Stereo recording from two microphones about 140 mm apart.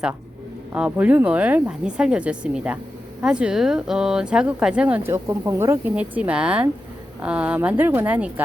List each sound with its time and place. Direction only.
0.7 s speech: 10° right (ahead or behind)